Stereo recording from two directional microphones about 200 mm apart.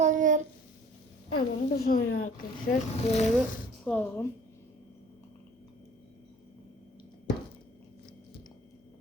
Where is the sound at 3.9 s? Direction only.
10° left (ahead or behind).